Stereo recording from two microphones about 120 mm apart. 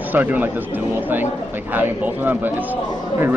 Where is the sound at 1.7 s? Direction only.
15° right (ahead or behind).